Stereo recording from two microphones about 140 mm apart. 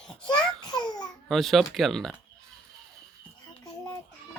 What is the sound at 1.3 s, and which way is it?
Speech, centre (ahead or behind).